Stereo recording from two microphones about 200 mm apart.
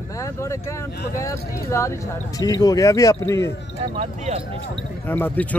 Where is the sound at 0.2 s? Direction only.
15° left (ahead or behind).